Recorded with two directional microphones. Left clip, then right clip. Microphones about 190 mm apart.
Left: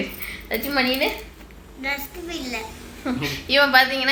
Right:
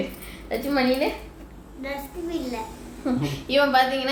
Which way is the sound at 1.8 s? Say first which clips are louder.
Left 4 dB; 25° right (ahead or behind).